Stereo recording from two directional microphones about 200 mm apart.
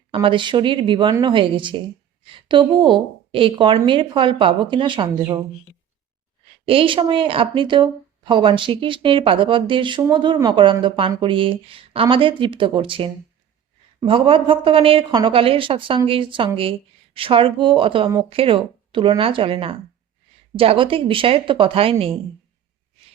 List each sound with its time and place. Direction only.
0.1 s a woman's voice: 25° right (ahead or behind)
6.7 s a woman's voice: 25° right (ahead or behind)